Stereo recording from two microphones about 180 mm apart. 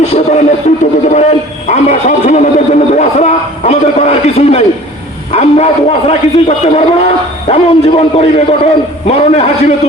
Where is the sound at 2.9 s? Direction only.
35° left (ahead or behind).